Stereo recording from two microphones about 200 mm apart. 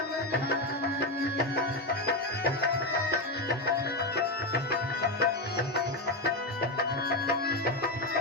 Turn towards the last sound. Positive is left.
turn(degrees=50)  # may be behind; listen again after turning